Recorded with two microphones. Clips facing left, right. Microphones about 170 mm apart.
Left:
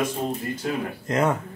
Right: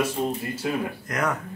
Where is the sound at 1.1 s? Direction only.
25° left (ahead or behind).